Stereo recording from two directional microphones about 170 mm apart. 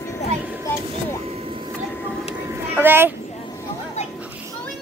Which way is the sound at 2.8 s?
10° right (ahead or behind).